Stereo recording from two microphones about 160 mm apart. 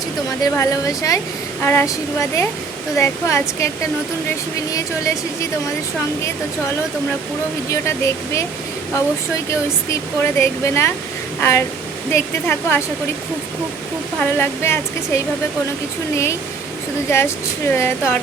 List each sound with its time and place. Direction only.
0.4 s speech: 20° left (ahead or behind)
4.7 s speech: 20° left (ahead or behind)
7.7 s speech: 15° left (ahead or behind)
9.5 s speech: 15° left (ahead or behind)
14.2 s speech: 15° left (ahead or behind)
17.1 s speech: 15° left (ahead or behind)